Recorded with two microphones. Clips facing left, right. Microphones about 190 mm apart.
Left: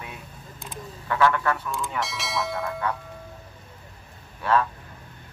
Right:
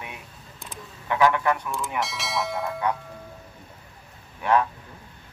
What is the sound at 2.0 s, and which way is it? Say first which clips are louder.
Speech: right 1 dB; centre (ahead or behind).